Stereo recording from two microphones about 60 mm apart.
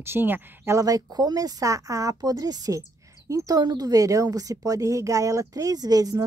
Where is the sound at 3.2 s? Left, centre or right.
Right.